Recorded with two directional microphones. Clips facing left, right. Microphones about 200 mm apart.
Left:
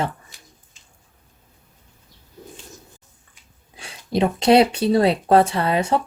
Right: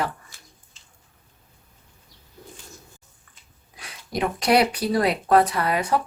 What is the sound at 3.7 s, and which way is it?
Speech, 25° left (ahead or behind).